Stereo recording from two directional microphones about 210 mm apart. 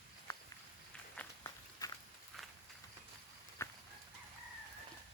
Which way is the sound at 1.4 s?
15° left (ahead or behind).